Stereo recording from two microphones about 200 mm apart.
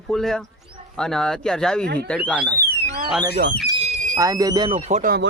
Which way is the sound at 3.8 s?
35° right (ahead or behind).